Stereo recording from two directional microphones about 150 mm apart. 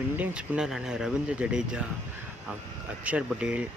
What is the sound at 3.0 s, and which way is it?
Speech, 10° right (ahead or behind).